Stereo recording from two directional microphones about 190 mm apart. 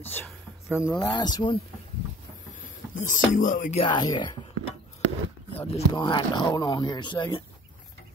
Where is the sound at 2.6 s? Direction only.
40° left (ahead or behind).